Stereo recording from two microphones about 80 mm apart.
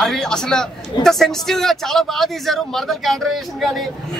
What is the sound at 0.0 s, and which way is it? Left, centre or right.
Speech, centre.